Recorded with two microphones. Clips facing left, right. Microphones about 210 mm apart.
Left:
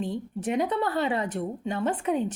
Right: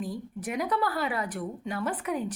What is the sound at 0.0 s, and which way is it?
Speech, 25° left (ahead or behind).